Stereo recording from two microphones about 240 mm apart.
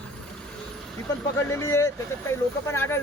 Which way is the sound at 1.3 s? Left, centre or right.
Centre.